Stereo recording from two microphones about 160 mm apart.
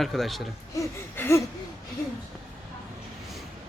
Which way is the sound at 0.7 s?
15° left (ahead or behind).